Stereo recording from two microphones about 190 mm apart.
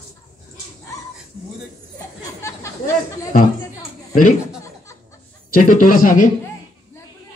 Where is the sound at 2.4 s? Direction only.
15° left (ahead or behind).